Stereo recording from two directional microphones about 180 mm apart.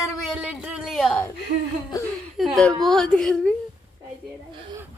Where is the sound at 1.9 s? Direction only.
20° left (ahead or behind).